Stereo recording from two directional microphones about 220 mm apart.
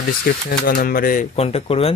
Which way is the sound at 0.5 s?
40° left (ahead or behind).